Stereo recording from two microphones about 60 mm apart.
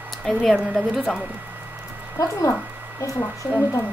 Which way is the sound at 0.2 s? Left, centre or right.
Centre.